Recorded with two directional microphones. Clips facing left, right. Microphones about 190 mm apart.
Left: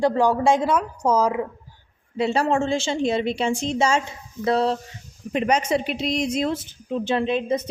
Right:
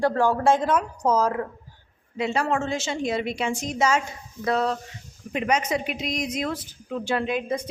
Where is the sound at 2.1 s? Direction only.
30° left (ahead or behind).